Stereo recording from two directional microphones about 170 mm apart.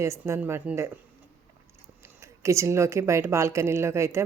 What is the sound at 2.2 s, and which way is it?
A woman's voice, 15° right (ahead or behind).